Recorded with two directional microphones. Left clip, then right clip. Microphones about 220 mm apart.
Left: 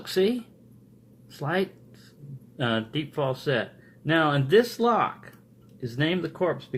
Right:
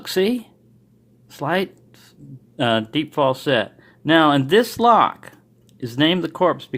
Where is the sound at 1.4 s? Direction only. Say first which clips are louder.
Right 6 dB; 40° right (ahead or behind).